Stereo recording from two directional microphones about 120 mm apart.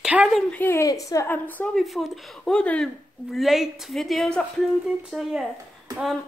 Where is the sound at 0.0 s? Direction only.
5° right (ahead or behind).